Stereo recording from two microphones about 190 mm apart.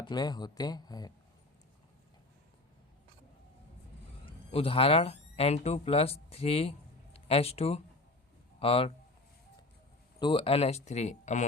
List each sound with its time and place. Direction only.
0.0 s speech: 20° left (ahead or behind)
4.3 s a man's voice: 30° left (ahead or behind)
10.2 s speech: 25° left (ahead or behind)